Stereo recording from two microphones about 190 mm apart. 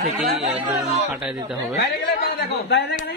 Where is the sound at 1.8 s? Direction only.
55° left (ahead or behind).